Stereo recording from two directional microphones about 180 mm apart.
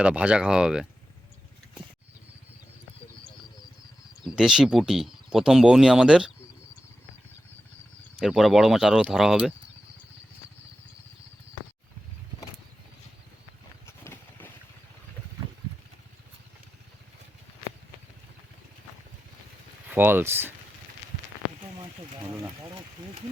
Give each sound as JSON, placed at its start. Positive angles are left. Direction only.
{"t": 0.0, "sound": "speech", "side_deg": -5}
{"t": 4.3, "sound": "speech", "side_deg": -5}
{"t": 8.2, "sound": "speech", "side_deg": 0}
{"t": 13.8, "sound": "vehicle", "side_deg": 15}
{"t": 19.9, "sound": "speech", "side_deg": -10}
{"t": 21.8, "sound": "a sound", "side_deg": -20}